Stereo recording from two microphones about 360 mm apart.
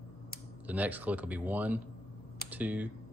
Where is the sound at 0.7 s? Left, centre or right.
Centre.